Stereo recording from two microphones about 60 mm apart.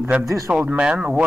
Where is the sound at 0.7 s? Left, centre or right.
Centre.